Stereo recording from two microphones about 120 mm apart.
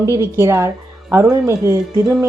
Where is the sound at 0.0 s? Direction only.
25° right (ahead or behind).